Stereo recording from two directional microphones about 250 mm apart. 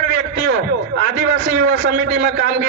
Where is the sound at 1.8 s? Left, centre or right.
Right.